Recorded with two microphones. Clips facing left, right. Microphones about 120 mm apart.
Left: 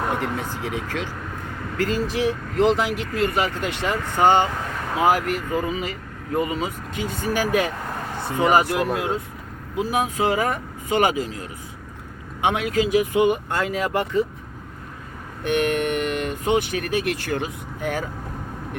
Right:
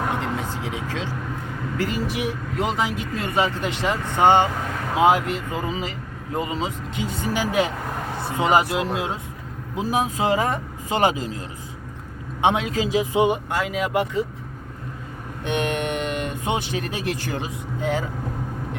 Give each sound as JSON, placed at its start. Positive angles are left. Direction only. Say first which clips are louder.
{"t": 0.5, "sound": "speech", "louder": "left 1 dB", "side_deg": -20}
{"t": 15.4, "sound": "speech", "louder": "left 3 dB", "side_deg": -20}